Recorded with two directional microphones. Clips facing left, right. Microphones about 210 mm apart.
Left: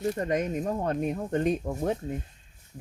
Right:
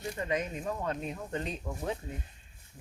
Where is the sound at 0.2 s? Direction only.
45° left (ahead or behind).